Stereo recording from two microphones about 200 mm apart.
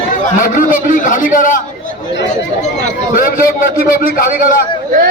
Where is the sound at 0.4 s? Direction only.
45° left (ahead or behind).